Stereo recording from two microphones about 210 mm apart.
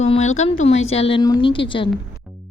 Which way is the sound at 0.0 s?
30° left (ahead or behind).